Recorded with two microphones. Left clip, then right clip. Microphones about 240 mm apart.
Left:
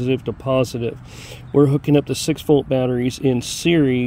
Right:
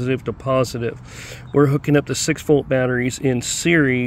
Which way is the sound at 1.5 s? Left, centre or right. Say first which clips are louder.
Left 1 dB; centre.